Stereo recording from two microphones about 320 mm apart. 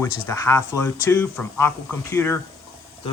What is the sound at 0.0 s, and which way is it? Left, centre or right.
Speech, centre.